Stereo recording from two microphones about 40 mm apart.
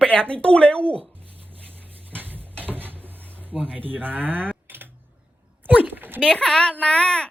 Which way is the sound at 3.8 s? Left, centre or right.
Right.